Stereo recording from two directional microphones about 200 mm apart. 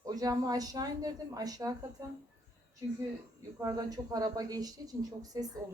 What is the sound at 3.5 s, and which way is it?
Speech, 15° right (ahead or behind).